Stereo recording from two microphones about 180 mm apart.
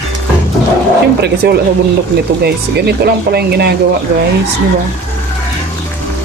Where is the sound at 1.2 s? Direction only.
60° right (ahead or behind).